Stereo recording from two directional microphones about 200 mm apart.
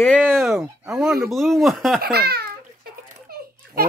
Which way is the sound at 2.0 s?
50° right (ahead or behind).